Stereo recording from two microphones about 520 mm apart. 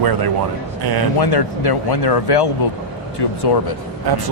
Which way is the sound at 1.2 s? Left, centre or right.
Left.